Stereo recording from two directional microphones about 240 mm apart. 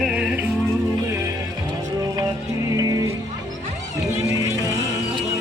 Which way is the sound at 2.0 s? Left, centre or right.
Centre.